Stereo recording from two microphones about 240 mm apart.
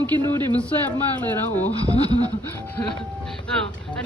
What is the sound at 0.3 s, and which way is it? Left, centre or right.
A man's voice, centre.